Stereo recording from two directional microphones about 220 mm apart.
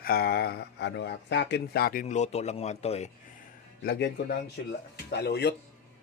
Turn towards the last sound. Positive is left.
turn(degrees=50)  # may be behind; listen again after turning